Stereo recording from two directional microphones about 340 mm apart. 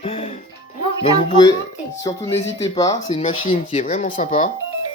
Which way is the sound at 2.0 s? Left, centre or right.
Centre.